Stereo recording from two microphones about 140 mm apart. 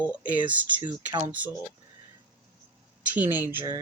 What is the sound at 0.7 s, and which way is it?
Speech, 35° right (ahead or behind).